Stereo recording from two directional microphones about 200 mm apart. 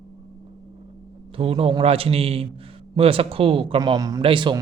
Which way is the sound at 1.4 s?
30° right (ahead or behind).